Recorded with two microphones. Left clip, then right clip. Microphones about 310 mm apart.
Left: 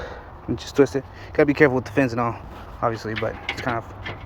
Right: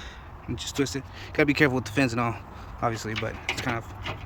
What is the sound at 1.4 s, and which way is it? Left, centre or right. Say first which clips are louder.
Speech: left 5 dB; centre.